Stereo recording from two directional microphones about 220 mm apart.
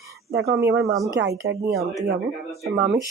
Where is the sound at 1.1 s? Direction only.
50° right (ahead or behind).